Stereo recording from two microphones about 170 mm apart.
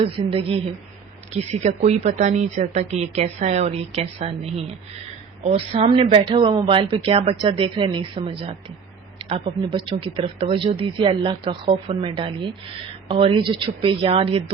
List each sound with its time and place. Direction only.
0.0 s a woman's voice: 35° right (ahead or behind)